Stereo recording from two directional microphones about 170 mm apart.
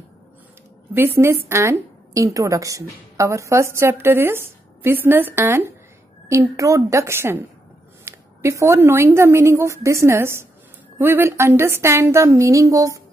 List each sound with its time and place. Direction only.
0.9 s a woman's voice: 15° right (ahead or behind)